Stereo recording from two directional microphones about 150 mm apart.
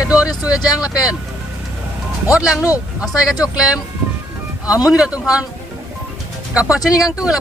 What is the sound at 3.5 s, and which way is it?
Speech, 5° right (ahead or behind).